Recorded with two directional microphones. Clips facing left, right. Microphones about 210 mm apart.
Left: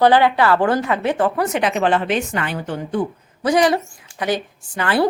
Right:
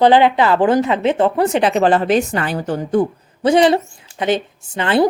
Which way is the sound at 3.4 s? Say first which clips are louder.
Right 4 dB; 25° right (ahead or behind).